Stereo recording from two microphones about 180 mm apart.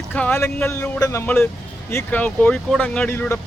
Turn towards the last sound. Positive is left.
turn(degrees=10)  # may be behind; listen again after turning